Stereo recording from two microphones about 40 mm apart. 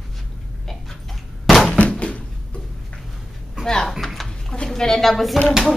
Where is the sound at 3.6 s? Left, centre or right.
Centre.